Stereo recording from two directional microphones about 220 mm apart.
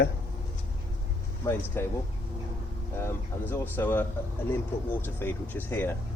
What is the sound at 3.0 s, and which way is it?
Speech, 10° left (ahead or behind).